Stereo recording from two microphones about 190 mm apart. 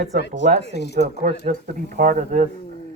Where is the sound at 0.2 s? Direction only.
65° left (ahead or behind).